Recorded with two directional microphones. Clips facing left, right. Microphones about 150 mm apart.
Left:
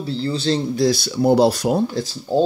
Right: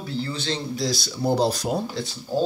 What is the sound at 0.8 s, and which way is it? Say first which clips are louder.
Speech: left 8 dB; 60° left (ahead or behind).